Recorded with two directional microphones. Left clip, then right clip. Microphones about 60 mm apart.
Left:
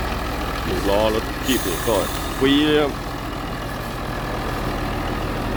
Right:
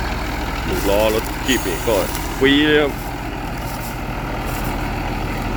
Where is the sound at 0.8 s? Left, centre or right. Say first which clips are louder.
Right 3 dB; left.